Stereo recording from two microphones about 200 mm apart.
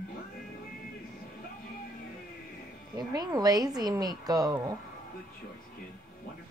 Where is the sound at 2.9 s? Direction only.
20° right (ahead or behind).